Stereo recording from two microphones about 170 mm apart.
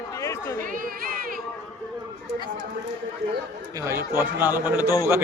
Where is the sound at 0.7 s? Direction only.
55° right (ahead or behind).